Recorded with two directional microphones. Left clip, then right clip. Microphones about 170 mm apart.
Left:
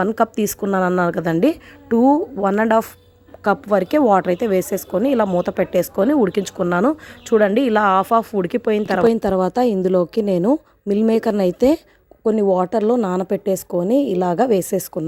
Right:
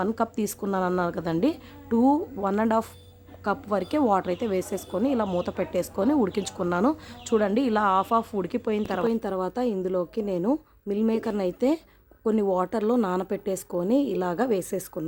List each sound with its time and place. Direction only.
0.0 s a woman's voice: 35° left (ahead or behind)
12.2 s a woman's voice: 20° left (ahead or behind)